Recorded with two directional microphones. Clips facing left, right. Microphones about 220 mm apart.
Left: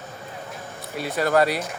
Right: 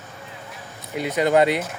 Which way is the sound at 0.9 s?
20° right (ahead or behind).